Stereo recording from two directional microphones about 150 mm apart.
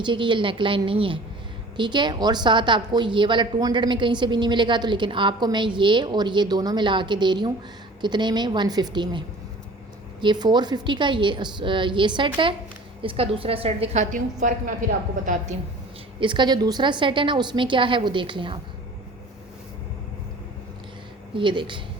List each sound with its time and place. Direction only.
0.0 s a woman's voice: 35° right (ahead or behind); by 14.8 s 60° right (ahead or behind)
16.2 s a woman's voice: 30° right (ahead or behind)
21.3 s a woman's voice: 35° right (ahead or behind)